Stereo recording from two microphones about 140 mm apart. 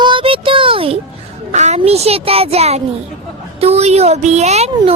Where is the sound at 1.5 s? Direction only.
55° right (ahead or behind).